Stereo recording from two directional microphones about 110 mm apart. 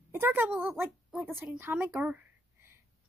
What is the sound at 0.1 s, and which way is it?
A woman's voice, 20° right (ahead or behind).